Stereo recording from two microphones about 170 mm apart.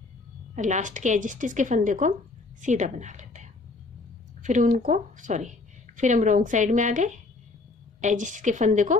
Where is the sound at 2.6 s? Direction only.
45° right (ahead or behind).